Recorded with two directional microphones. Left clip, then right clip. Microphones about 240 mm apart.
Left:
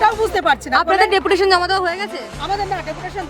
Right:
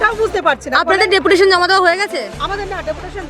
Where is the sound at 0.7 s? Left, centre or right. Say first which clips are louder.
Right 2 dB; centre.